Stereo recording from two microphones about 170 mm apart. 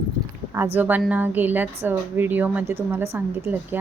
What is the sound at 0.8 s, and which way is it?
Speech, 10° right (ahead or behind).